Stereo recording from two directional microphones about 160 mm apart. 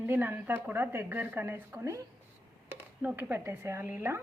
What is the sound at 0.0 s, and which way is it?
A woman's voice, 10° right (ahead or behind).